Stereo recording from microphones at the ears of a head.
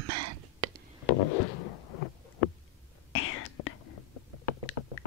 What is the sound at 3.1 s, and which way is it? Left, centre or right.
Whispering, left.